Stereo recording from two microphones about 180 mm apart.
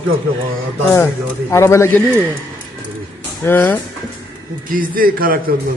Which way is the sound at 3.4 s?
10° left (ahead or behind).